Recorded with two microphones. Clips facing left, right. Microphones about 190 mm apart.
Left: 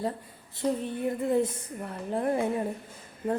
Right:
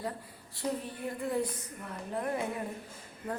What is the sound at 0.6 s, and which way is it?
A woman's voice, 20° left (ahead or behind).